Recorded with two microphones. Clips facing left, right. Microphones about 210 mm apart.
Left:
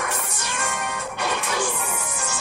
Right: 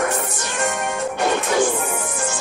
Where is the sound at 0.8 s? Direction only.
45° right (ahead or behind).